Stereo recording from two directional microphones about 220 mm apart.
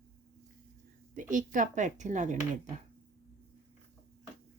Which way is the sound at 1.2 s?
35° right (ahead or behind).